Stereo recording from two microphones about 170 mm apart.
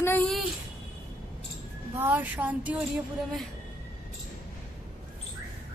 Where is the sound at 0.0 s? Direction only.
10° left (ahead or behind).